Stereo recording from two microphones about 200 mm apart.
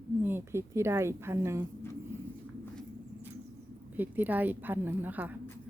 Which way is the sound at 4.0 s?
10° right (ahead or behind).